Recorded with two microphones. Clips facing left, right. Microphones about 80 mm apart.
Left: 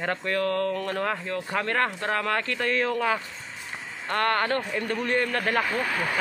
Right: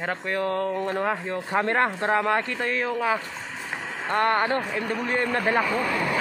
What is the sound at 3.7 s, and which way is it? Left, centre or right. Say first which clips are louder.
Vehicle: right 6 dB; right.